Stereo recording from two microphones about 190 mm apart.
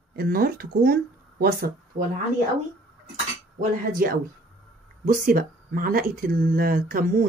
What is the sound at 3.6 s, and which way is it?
Speech, 50° right (ahead or behind).